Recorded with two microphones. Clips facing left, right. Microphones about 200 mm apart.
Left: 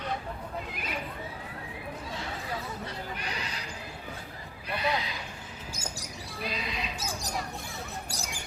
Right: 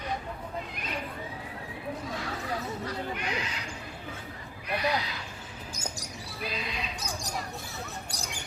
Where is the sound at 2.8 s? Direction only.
35° left (ahead or behind).